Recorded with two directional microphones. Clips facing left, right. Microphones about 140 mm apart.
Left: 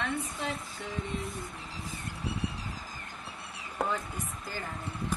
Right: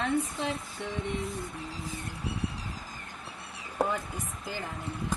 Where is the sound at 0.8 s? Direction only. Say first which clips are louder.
Right 3 dB; centre (ahead or behind).